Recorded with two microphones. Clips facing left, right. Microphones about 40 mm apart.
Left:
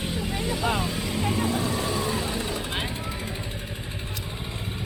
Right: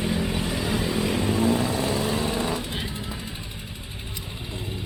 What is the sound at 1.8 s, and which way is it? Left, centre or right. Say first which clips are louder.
Vehicle: right 2 dB; centre.